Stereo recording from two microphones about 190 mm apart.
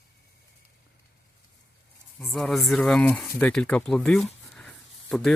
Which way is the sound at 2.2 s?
Centre (ahead or behind).